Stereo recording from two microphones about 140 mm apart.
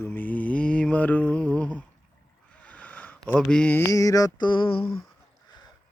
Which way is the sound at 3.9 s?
25° left (ahead or behind).